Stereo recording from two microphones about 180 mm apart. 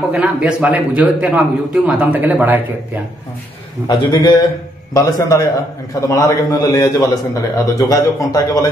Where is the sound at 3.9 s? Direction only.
25° left (ahead or behind).